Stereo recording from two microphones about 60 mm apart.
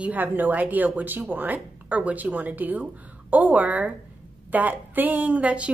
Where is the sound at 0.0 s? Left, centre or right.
Right.